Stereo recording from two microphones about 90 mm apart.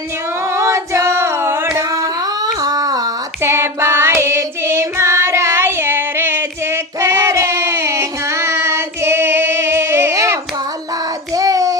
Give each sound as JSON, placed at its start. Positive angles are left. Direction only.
{"t": 0.5, "sound": "singing", "side_deg": -35}
{"t": 2.6, "sound": "a sound", "side_deg": -45}
{"t": 3.4, "sound": "child singing", "side_deg": -30}
{"t": 11.3, "sound": "child singing", "side_deg": -40}